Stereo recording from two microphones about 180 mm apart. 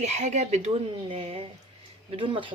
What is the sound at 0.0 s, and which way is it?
A woman's voice, 40° right (ahead or behind).